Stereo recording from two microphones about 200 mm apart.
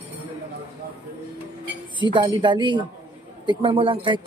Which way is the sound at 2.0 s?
25° right (ahead or behind).